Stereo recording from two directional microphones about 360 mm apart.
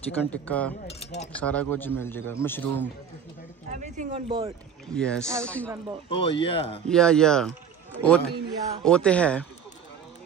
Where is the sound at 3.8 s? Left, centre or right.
Centre.